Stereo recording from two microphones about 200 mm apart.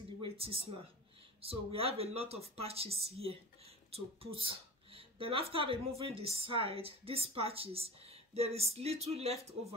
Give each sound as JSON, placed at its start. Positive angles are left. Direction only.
{"t": 0.2, "sound": "a woman's voice", "side_deg": -30}